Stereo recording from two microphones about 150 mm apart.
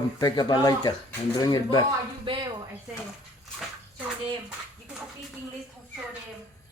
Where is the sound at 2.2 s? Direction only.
30° right (ahead or behind).